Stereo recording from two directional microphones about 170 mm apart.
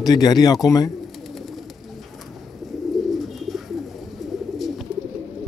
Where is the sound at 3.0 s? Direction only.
Centre (ahead or behind).